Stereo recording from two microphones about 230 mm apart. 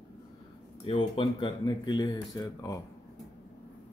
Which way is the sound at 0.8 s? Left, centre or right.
Left.